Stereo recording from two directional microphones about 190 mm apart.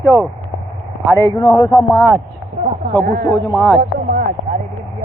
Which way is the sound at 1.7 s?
Centre (ahead or behind).